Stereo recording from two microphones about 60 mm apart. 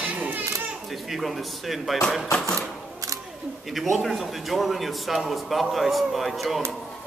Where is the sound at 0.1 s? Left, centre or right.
Right.